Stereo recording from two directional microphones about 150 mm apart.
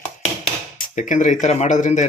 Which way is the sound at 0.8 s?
60° left (ahead or behind).